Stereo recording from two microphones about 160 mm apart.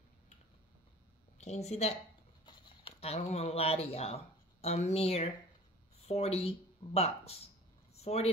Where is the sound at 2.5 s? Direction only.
30° left (ahead or behind).